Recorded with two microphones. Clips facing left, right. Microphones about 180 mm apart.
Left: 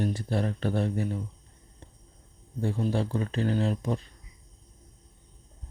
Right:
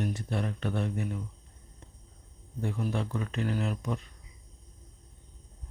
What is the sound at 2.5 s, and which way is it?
Speech, 30° left (ahead or behind).